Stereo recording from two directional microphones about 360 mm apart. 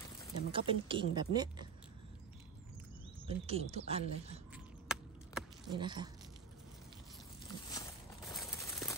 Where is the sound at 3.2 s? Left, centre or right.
Centre.